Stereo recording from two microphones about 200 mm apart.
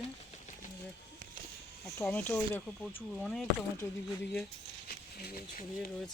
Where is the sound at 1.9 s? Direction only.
10° left (ahead or behind).